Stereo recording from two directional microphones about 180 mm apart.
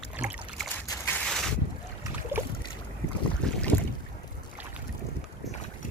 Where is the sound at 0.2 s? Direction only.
5° right (ahead or behind).